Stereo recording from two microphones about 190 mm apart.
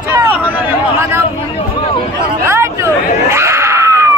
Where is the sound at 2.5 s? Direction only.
15° right (ahead or behind).